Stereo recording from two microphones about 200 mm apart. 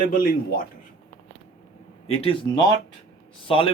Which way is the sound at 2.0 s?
30° left (ahead or behind).